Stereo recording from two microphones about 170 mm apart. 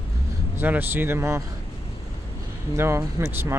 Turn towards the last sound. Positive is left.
turn(degrees=-15)  # may be behind; listen again after turning